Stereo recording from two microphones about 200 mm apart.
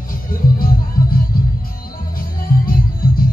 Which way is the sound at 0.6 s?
45° left (ahead or behind).